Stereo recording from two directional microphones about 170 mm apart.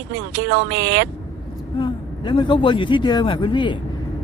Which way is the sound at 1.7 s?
30° left (ahead or behind).